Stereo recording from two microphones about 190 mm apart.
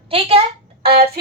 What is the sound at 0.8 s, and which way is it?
Speech, 55° right (ahead or behind).